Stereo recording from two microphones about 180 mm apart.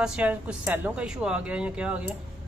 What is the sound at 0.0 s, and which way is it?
Speech, 5° right (ahead or behind).